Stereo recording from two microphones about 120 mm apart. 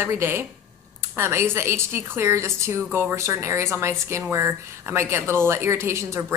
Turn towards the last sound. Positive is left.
turn(degrees=-20)  # may be behind; listen again after turning